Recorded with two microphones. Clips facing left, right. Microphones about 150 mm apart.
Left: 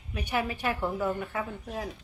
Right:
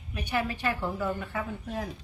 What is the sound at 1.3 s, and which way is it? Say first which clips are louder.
Speech: right 1 dB; 5° left (ahead or behind).